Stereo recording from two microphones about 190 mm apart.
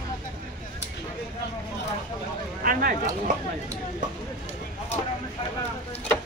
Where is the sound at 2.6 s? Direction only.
50° right (ahead or behind).